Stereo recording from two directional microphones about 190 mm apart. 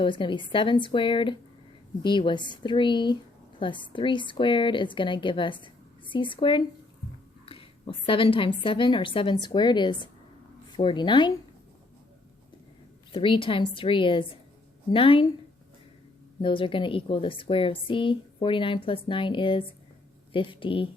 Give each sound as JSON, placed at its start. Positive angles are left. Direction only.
{"t": 0.0, "sound": "a woman's voice", "side_deg": 25}
{"t": 7.4, "sound": "a sound", "side_deg": 30}
{"t": 8.6, "sound": "a woman's voice", "side_deg": 25}
{"t": 13.1, "sound": "a woman's voice", "side_deg": 25}
{"t": 16.4, "sound": "a woman's voice", "side_deg": 25}